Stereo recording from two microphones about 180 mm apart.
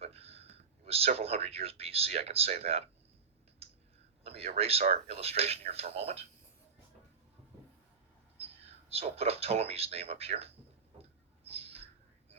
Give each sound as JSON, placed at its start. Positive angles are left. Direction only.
{"t": 0.0, "sound": "speech", "side_deg": -35}
{"t": 4.2, "sound": "speech", "side_deg": -35}
{"t": 8.4, "sound": "speech", "side_deg": -35}
{"t": 11.4, "sound": "a sound", "side_deg": -35}